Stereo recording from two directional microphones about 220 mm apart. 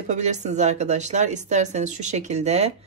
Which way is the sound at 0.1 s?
30° right (ahead or behind).